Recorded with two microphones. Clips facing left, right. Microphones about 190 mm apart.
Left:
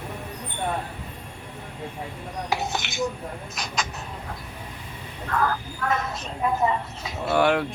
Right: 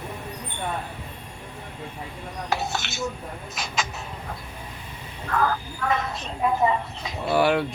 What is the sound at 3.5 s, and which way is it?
Speech, centre (ahead or behind).